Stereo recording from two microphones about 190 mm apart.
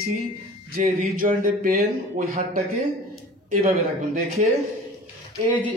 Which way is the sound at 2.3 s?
35° right (ahead or behind).